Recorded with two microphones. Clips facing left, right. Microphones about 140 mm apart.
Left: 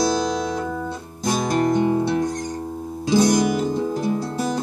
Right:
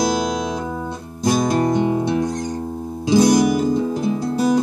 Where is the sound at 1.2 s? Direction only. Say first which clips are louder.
Right 3 dB; 15° right (ahead or behind).